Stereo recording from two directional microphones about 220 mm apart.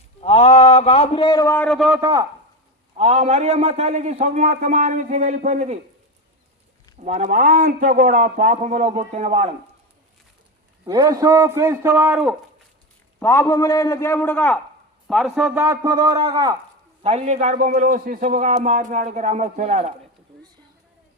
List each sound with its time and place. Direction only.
0.2 s a man's voice: 30° left (ahead or behind); by 2.0 s centre (ahead or behind)
2.0 s a man's voice: 15° right (ahead or behind)
3.0 s a man's voice: 30° right (ahead or behind)
7.0 s a man's voice: 30° right (ahead or behind)
10.8 s a man's voice: 15° right (ahead or behind)
13.1 s a man's voice: 10° left (ahead or behind); by 16.6 s 20° right (ahead or behind)
17.0 s a man's voice: 30° right (ahead or behind)